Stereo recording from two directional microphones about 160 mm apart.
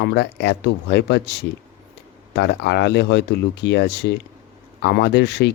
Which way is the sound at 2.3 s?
90° left.